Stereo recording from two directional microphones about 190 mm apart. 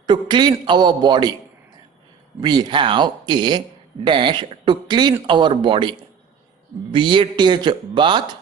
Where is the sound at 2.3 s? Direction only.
20° right (ahead or behind).